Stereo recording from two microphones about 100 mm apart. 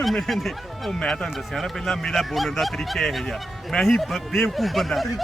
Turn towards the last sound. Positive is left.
turn(degrees=0)  # may be behind; listen again after turning